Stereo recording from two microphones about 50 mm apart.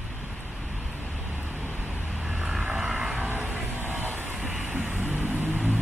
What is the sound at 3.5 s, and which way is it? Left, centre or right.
Music, right.